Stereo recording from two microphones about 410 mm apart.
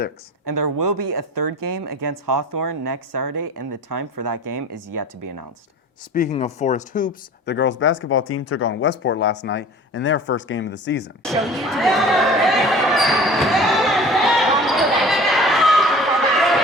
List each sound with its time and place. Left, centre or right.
0.4 s speech: right
3.4 s speech: right
3.8 s speech: right
5.2 s speech: right
6.1 s speech: centre
11.2 s a sound: centre